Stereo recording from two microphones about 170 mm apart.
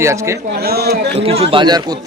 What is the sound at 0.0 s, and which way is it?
Speech, 15° right (ahead or behind).